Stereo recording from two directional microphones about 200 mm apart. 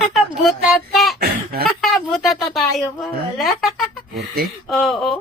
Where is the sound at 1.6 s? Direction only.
Centre (ahead or behind).